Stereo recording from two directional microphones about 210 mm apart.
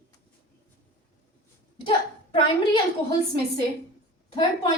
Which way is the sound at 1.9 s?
25° left (ahead or behind).